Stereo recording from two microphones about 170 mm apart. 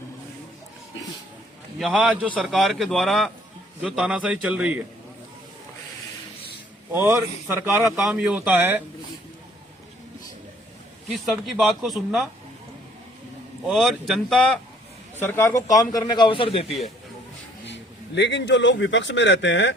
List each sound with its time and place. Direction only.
1.8 s speech: 5° right (ahead or behind)
6.9 s speech: 15° right (ahead or behind)
11.1 s speech: centre (ahead or behind)
13.7 s speech: centre (ahead or behind)
15.3 s a man's voice: 15° left (ahead or behind); by 16.7 s 30° left (ahead or behind)
17.7 s speech: 90° left